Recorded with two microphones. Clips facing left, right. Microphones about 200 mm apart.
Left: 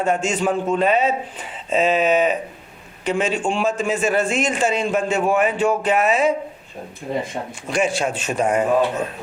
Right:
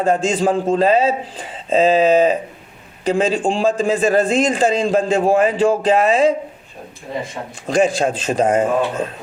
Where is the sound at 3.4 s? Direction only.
35° right (ahead or behind).